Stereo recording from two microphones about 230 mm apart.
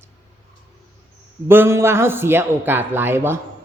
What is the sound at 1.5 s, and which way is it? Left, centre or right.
A man's voice, centre.